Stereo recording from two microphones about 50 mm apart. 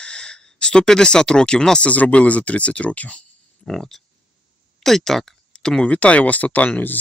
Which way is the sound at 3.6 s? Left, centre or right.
Centre.